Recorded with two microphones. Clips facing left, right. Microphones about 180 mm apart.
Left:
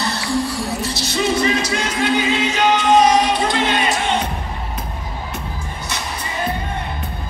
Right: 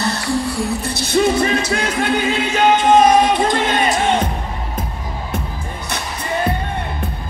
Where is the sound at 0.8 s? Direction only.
55° right (ahead or behind).